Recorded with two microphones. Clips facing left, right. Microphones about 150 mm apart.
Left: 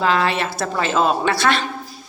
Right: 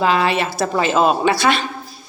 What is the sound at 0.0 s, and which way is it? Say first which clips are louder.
A woman's voice: right 2 dB; 10° right (ahead or behind).